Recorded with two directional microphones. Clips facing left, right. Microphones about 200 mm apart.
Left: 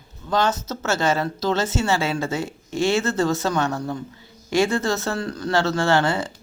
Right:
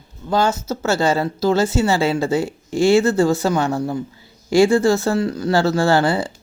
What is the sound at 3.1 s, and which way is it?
Speech, 30° right (ahead or behind).